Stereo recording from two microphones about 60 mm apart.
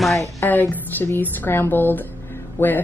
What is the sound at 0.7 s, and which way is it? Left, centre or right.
A woman's voice, left.